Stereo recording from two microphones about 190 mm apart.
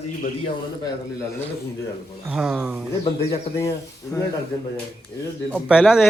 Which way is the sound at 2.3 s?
5° right (ahead or behind).